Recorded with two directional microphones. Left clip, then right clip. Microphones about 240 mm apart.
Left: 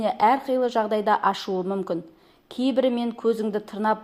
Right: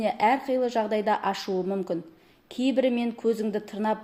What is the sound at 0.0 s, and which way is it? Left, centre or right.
Speech, centre.